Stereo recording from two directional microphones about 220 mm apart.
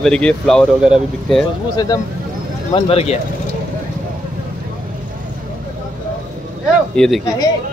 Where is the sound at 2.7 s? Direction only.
25° left (ahead or behind).